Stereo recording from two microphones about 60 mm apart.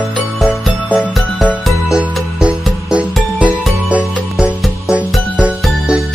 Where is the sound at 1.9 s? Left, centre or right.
Centre.